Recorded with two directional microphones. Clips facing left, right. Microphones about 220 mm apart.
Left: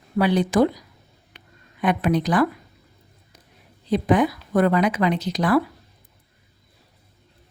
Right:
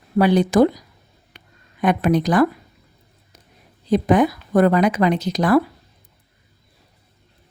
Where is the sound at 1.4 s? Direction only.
45° right (ahead or behind).